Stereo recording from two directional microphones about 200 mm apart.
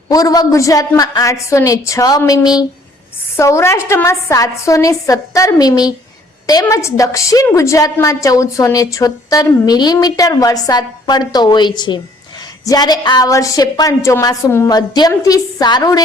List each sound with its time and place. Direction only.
0.1 s a woman's voice: 20° left (ahead or behind)